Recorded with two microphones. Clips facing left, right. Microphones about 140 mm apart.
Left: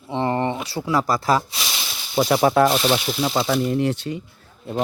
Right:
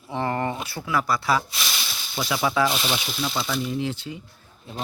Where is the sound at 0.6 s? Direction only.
35° left (ahead or behind); by 4.8 s 60° left (ahead or behind).